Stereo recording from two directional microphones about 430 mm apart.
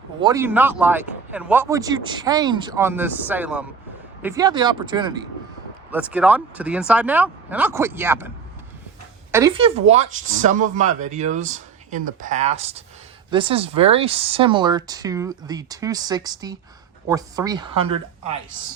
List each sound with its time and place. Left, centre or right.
0.2 s speech: centre
9.3 s speech: centre